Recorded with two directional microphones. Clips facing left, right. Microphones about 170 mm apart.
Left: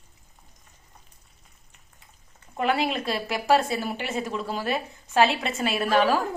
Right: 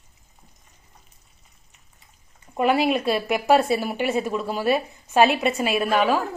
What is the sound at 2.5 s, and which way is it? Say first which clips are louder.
Speech: right 5 dB; 20° right (ahead or behind).